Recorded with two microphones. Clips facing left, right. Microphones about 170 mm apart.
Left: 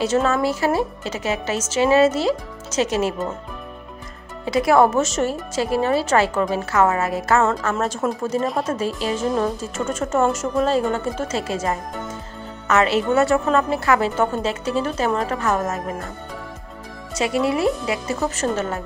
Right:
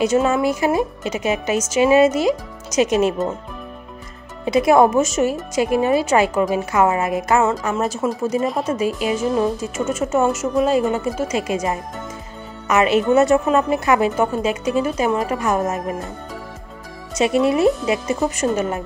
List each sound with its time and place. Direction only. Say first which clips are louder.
0.0 s speech: right 2 dB; 15° right (ahead or behind)
4.5 s speech: right 2 dB; 20° right (ahead or behind)
7.4 s speech: right 1 dB; 5° right (ahead or behind)
17.1 s speech: right 4 dB; 20° right (ahead or behind)